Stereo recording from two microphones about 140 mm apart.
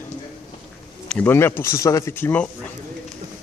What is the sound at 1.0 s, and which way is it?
Speech, 10° left (ahead or behind).